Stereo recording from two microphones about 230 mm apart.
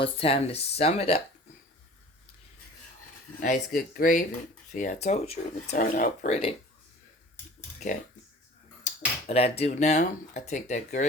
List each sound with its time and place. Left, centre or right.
0.0 s speech: left
3.4 s speech: left
7.8 s speech: left
8.9 s a sound: left
9.2 s speech: left